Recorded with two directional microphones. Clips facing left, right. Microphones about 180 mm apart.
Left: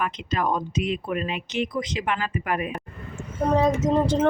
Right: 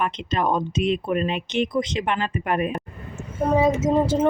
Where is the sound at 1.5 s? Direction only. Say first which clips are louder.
Right 3 dB; 10° left (ahead or behind).